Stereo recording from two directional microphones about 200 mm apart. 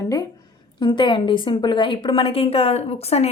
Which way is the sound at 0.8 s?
20° left (ahead or behind).